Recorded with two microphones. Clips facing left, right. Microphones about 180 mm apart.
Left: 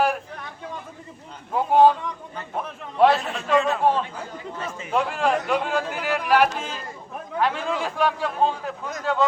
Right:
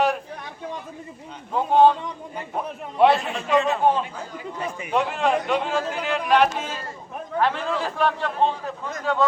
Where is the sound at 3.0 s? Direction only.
Centre (ahead or behind).